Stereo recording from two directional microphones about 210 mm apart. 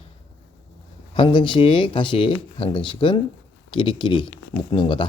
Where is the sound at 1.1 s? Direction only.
25° left (ahead or behind).